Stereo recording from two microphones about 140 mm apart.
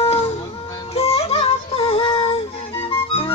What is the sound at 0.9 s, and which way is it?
Music, 45° left (ahead or behind).